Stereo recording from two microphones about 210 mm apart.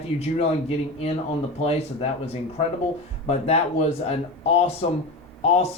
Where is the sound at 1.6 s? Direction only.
30° left (ahead or behind).